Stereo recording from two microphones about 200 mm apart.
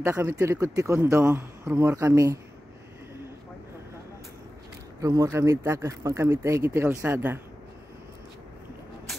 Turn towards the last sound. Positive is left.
turn(degrees=-10)  # may be behind; listen again after turning